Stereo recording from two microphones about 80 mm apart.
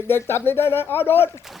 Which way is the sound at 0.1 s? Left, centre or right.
Left.